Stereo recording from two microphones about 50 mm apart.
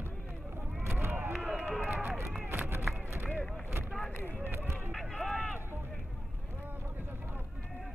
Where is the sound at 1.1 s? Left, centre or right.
Right.